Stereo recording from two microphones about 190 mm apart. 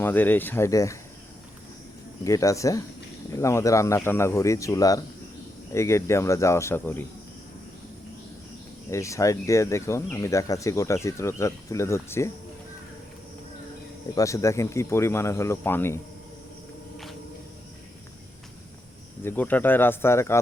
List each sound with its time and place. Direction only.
0.0 s speech: 10° left (ahead or behind)
2.2 s speech: 15° left (ahead or behind)
8.9 s speech: 15° left (ahead or behind)
14.2 s speech: 15° left (ahead or behind)
19.2 s speech: 10° left (ahead or behind)